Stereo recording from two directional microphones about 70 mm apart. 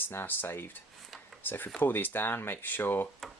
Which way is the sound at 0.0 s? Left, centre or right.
Left.